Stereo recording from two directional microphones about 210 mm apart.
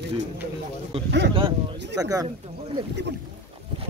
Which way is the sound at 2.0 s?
15° right (ahead or behind).